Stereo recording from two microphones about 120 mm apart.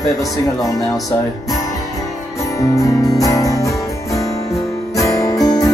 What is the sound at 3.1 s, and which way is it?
Music, 30° left (ahead or behind).